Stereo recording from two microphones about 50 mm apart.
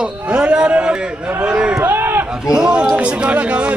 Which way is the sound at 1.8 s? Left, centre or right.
Right.